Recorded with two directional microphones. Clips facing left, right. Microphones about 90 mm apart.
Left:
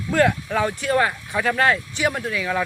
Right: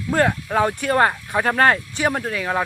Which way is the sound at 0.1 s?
35° right (ahead or behind).